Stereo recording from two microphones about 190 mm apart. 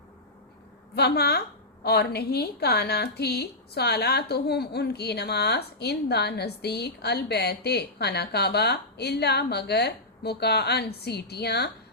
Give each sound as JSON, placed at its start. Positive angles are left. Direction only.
{"t": 0.9, "sound": "a woman's voice", "side_deg": 60}